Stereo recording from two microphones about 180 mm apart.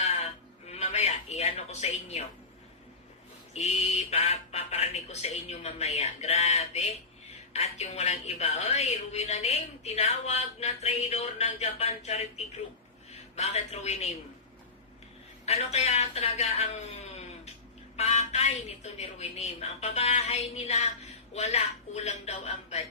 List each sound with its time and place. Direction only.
0.0 s a sound: 35° left (ahead or behind)
0.7 s television: 35° left (ahead or behind)
3.5 s a woman's voice: 35° left (ahead or behind)
15.4 s a woman's voice: 35° left (ahead or behind)
17.9 s a woman's voice: 35° left (ahead or behind)